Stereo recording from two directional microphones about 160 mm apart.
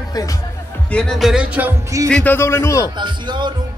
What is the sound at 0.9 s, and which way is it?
Music, 5° left (ahead or behind).